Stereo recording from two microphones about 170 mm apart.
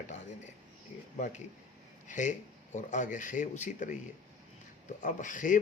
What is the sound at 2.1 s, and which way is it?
Speech, 45° left (ahead or behind).